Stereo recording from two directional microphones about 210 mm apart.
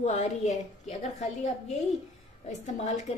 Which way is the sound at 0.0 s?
35° left (ahead or behind).